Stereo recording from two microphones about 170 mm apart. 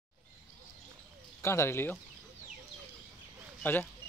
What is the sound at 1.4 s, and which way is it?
Speech, 15° left (ahead or behind).